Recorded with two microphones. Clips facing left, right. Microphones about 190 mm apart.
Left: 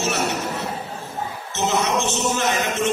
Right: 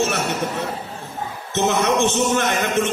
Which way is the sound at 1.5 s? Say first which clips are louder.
Right 3 dB; 60° right (ahead or behind).